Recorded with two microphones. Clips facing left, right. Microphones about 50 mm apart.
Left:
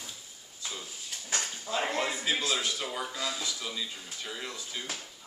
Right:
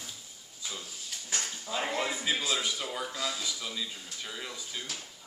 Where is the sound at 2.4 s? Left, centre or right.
Centre.